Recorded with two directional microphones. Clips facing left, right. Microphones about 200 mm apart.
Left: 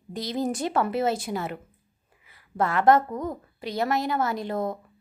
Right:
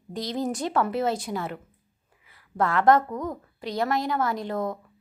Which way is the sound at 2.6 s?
5° left (ahead or behind).